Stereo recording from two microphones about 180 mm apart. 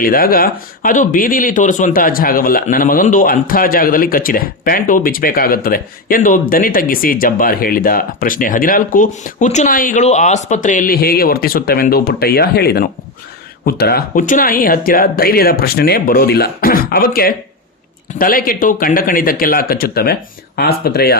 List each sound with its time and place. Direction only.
0.0 s speech: 55° left (ahead or behind)